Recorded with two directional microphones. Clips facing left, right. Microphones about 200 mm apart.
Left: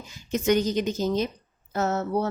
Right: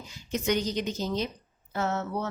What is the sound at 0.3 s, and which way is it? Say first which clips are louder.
A woman's voice: left 5 dB; 45° left (ahead or behind).